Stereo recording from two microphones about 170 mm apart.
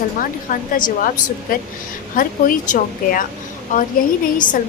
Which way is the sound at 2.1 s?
55° left (ahead or behind).